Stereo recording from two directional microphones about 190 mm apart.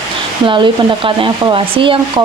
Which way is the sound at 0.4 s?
25° right (ahead or behind).